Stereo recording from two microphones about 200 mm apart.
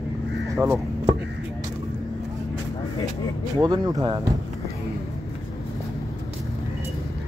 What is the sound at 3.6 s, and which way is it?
Speech, 20° right (ahead or behind).